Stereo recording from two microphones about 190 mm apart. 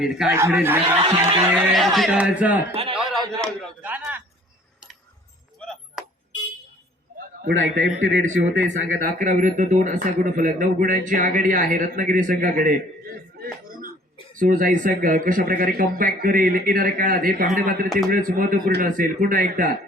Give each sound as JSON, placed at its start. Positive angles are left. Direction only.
{"t": 0.0, "sound": "a man's voice", "side_deg": -5}
{"t": 0.9, "sound": "speech", "side_deg": -30}
{"t": 1.5, "sound": "a man's voice", "side_deg": 0}
{"t": 5.5, "sound": "chop", "side_deg": 5}
{"t": 7.4, "sound": "a man's voice", "side_deg": -90}
{"t": 9.0, "sound": "a man's voice", "side_deg": -45}